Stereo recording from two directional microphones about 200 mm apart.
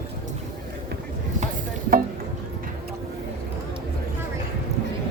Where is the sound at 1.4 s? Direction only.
45° right (ahead or behind).